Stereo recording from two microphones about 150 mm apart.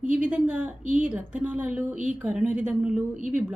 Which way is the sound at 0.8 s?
60° right (ahead or behind).